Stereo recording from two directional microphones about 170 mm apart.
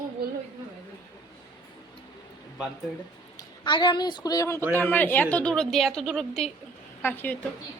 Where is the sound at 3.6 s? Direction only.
25° left (ahead or behind); by 7.4 s 10° left (ahead or behind).